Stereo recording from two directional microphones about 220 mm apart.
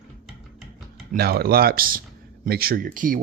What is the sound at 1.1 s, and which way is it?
Speech, 45° right (ahead or behind).